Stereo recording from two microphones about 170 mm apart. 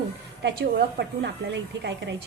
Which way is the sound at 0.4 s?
85° right.